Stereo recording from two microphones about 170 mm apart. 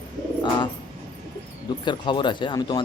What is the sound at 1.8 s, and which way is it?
Speech, 30° left (ahead or behind).